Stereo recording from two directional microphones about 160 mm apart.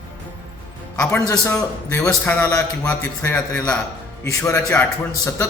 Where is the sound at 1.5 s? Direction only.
15° left (ahead or behind).